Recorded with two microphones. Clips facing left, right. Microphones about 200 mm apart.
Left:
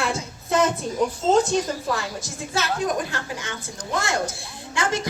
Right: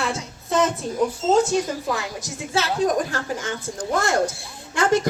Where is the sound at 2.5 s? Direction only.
30° right (ahead or behind).